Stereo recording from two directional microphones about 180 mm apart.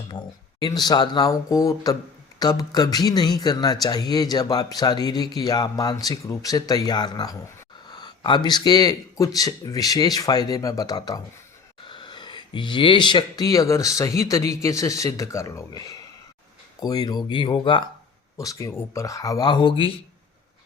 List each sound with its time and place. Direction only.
0.1 s speech: 20° left (ahead or behind)